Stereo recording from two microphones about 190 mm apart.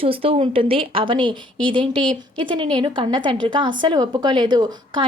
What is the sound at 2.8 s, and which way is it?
Speech, 25° right (ahead or behind).